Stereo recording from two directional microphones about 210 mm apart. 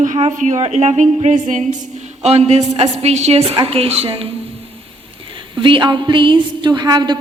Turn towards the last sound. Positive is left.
turn(degrees=-20)  # may be behind; listen again after turning